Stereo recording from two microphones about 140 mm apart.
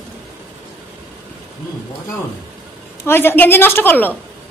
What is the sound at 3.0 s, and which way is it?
A woman's voice, 15° left (ahead or behind).